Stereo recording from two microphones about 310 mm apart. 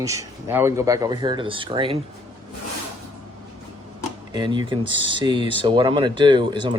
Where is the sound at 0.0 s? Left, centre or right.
Centre.